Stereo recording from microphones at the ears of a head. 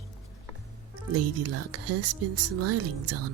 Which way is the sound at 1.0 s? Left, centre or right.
Right.